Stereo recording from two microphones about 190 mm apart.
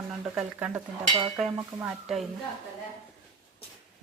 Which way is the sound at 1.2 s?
30° right (ahead or behind).